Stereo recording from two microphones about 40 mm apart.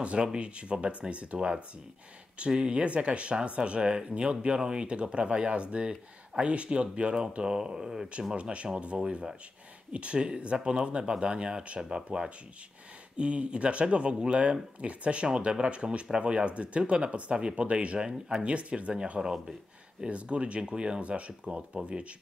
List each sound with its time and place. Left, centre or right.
0.0 s speech: right
8.4 s speech: right